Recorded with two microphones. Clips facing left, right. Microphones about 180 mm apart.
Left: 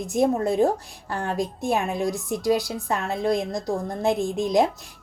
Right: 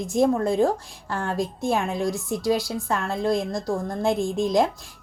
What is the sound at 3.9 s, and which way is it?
Speech, 20° left (ahead or behind).